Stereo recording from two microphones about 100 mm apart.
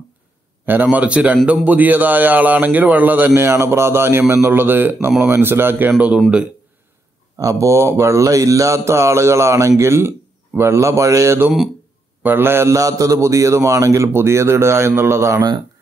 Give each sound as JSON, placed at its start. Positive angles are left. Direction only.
{"t": 0.7, "sound": "a man's voice", "side_deg": -15}
{"t": 7.3, "sound": "speech", "side_deg": -35}